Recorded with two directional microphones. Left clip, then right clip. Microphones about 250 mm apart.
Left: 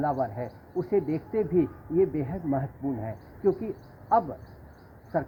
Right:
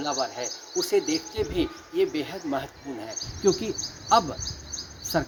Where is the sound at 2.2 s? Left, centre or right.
Right.